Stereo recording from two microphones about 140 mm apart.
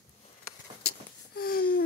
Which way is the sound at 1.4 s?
90° left.